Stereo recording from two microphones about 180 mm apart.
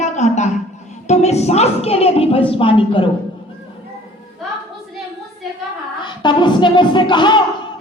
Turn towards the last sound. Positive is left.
turn(degrees=25)  # may be behind; listen again after turning